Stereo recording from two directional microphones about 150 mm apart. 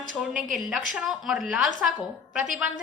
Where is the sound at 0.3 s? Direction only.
60° right (ahead or behind).